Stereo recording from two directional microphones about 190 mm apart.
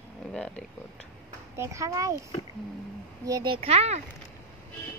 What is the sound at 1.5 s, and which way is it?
Speech, 15° right (ahead or behind).